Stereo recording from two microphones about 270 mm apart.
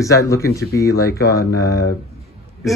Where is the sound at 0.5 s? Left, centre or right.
Centre.